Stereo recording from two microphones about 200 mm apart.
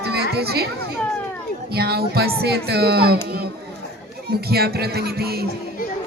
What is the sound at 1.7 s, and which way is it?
A child's voice, 50° right (ahead or behind).